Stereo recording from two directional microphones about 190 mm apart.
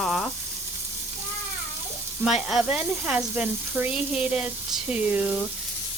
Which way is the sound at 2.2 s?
Centre (ahead or behind).